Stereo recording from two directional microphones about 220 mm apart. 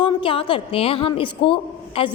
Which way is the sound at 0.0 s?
25° left (ahead or behind).